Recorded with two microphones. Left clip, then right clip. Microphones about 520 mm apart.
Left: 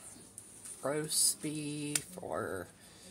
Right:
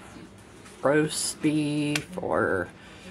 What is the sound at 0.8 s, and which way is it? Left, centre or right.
Speech, left.